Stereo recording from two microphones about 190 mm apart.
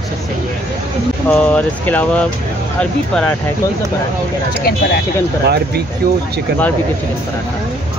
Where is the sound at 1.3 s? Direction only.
5° left (ahead or behind).